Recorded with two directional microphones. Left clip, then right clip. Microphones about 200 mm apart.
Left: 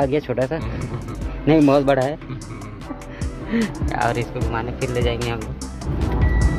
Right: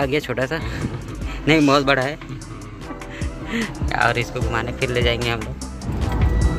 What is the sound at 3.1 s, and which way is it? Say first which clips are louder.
Music: left 2 dB; 20° left (ahead or behind).